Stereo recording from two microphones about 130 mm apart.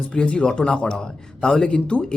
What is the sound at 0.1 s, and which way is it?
Speech, 10° left (ahead or behind).